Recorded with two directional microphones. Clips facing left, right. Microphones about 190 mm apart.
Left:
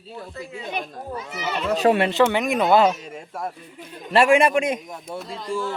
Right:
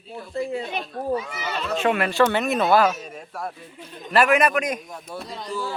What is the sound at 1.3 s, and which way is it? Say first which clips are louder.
Speech: left 3 dB; 15° left (ahead or behind).